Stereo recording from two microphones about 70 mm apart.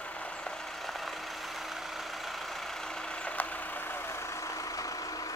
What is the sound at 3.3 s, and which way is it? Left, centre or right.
Vehicle, left.